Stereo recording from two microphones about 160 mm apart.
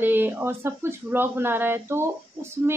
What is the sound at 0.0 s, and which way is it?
A woman's voice, 10° right (ahead or behind).